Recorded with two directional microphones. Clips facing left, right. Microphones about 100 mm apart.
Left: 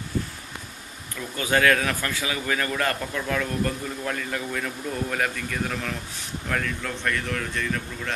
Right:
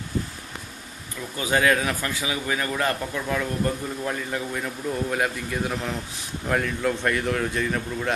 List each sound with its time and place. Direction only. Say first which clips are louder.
1.3 s a man's voice: even; 15° right (ahead or behind)